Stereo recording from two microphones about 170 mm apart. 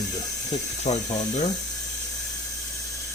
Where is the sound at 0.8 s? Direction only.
40° left (ahead or behind).